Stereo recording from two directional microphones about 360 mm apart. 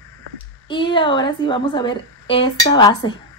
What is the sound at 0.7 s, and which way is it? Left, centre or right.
Speech, centre.